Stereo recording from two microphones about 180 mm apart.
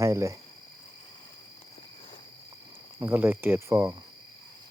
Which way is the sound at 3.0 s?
15° right (ahead or behind).